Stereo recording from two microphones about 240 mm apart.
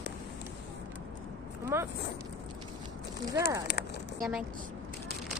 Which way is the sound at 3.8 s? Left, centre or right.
Left.